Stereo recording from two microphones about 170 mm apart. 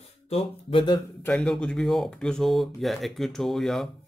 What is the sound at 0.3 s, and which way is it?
Speech, 35° left (ahead or behind).